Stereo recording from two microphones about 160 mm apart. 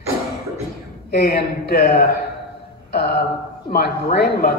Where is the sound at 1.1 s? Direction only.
80° left.